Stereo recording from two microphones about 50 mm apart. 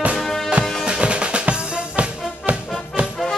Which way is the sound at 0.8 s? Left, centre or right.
Right.